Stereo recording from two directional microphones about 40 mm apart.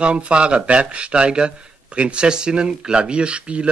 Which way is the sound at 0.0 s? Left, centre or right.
Right.